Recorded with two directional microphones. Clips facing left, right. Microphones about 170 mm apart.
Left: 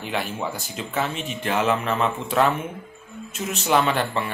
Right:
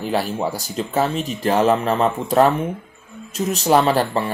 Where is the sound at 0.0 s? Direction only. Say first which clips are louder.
Right 6 dB; 35° right (ahead or behind).